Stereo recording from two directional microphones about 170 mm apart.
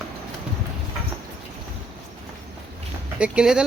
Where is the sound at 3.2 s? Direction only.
5° right (ahead or behind).